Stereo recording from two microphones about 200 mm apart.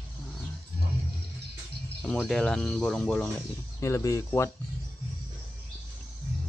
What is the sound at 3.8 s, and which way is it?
Speech, 15° left (ahead or behind).